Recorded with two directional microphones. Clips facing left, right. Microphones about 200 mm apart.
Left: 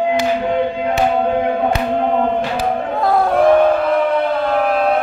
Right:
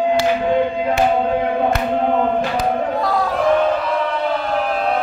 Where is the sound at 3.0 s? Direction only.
55° left (ahead or behind).